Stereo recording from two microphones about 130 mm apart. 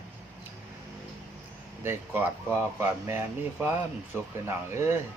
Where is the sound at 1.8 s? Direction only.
15° right (ahead or behind).